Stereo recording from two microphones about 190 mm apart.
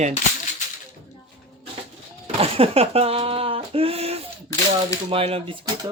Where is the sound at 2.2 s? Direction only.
30° right (ahead or behind).